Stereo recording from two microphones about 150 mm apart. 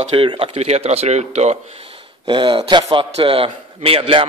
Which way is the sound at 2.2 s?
35° right (ahead or behind).